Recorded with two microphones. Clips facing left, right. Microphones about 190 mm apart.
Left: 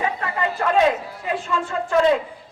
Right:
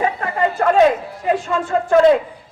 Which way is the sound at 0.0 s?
45° right (ahead or behind).